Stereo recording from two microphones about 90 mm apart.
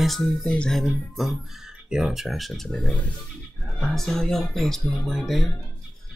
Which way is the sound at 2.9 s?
15° left (ahead or behind).